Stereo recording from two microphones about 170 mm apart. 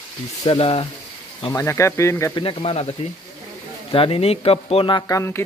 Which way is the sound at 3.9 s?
30° left (ahead or behind).